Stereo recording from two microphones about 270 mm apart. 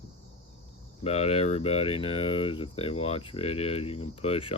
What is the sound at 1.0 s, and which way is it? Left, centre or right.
Speech, left.